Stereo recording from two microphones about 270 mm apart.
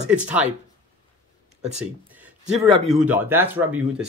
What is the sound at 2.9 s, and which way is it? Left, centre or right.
Speech, centre.